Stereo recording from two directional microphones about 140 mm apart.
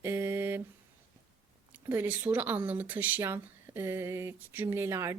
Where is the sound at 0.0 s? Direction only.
20° right (ahead or behind).